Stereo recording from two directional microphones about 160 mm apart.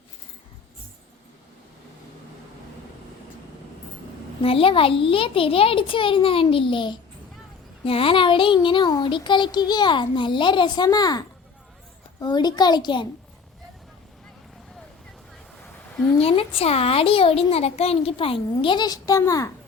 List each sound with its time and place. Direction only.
4.4 s a child's voice: 35° left (ahead or behind)
7.9 s child singing: 35° left (ahead or behind)
16.2 s a child's voice: 35° left (ahead or behind); by 19.5 s 20° left (ahead or behind)